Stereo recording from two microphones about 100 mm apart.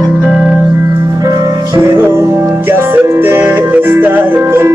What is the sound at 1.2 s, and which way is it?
Music, 30° right (ahead or behind).